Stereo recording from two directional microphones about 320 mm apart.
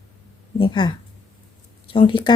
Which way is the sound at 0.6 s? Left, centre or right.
Centre.